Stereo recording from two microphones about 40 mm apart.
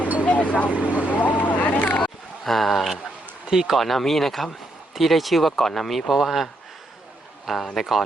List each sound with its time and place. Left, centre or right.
0.3 s vehicle: left
0.7 s speech: right
1.2 s vehicle: left
2.0 s a sound: centre
3.5 s speech: centre
3.8 s speech: centre
6.1 s a man's voice: centre